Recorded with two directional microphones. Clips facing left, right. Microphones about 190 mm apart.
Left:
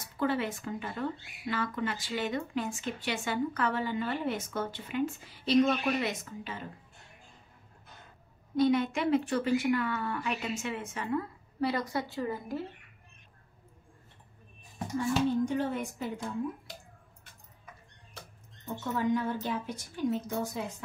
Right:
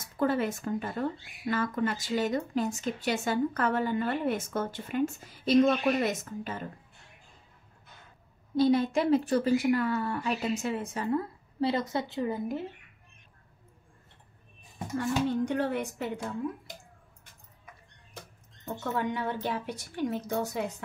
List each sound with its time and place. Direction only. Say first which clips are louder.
0.0 s speech: right 3 dB; 45° right (ahead or behind)
8.5 s a woman's voice: right 2 dB; 35° right (ahead or behind)
15.0 s speech: even; 70° right (ahead or behind)
18.9 s a woman's voice: left 3 dB; 65° right (ahead or behind)